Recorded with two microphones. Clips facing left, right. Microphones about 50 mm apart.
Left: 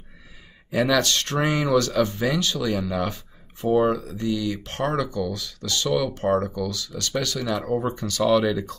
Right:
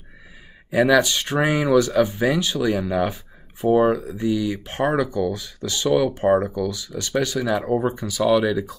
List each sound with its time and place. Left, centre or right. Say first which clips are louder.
0.7 s speech: right 4 dB; centre